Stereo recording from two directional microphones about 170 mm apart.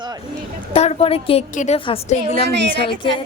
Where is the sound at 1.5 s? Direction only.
50° left (ahead or behind).